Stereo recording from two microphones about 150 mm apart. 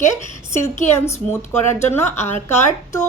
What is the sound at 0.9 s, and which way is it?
A woman's voice, 15° left (ahead or behind).